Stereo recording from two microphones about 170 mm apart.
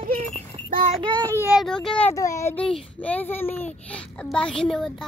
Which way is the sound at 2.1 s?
20° left (ahead or behind).